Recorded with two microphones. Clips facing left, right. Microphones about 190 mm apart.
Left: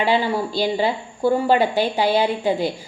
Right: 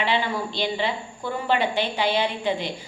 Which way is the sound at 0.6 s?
40° left (ahead or behind).